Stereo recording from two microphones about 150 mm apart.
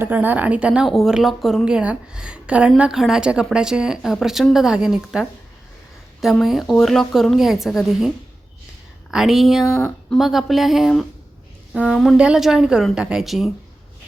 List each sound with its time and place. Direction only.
0.0 s a woman's voice: 10° right (ahead or behind)